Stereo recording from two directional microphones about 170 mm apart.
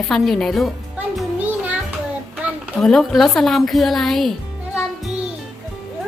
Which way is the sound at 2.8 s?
Centre (ahead or behind).